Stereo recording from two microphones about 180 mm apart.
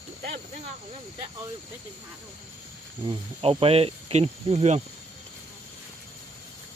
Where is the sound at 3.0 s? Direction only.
25° right (ahead or behind).